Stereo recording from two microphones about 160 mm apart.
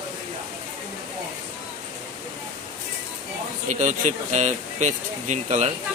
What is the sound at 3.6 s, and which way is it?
Speech, 50° right (ahead or behind).